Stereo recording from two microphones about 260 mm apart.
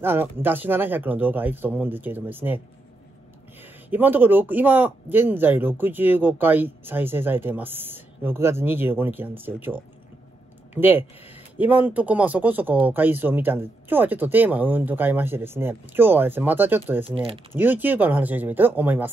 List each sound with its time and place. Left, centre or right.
0.0 s speech: centre
3.9 s speech: centre
17.0 s speech: right
17.6 s speech: centre